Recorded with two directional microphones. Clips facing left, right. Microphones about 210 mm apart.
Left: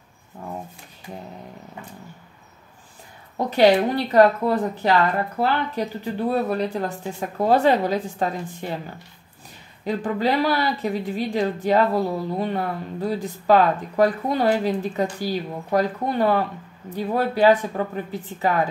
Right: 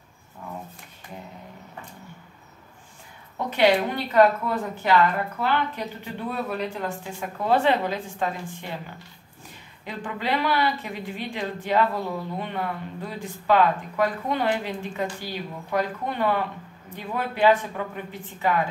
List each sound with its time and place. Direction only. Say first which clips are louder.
3.3 s speech: left 4 dB; 35° left (ahead or behind)
9.8 s speech: left 7 dB; 40° left (ahead or behind)